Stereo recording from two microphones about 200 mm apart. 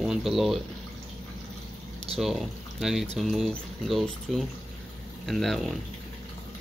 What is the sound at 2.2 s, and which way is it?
Speech, centre (ahead or behind).